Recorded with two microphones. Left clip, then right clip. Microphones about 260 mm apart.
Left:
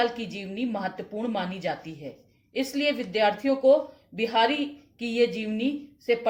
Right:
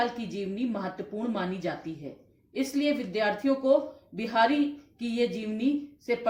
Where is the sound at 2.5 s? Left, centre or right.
Left.